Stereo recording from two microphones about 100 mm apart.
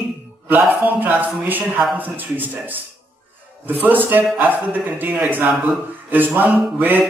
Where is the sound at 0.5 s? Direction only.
15° right (ahead or behind).